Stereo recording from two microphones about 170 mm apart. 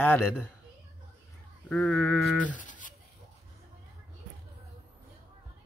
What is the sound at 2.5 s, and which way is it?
Toothbrush, 50° left (ahead or behind).